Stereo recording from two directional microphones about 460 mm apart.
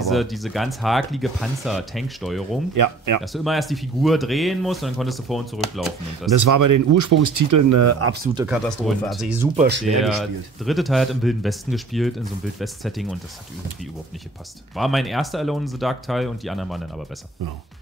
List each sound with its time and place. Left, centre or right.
0.0 s speech: centre
2.7 s speech: right
3.2 s speech: centre
6.3 s speech: right
8.4 s speech: centre
9.6 s speech: right
9.8 s speech: centre
14.8 s speech: centre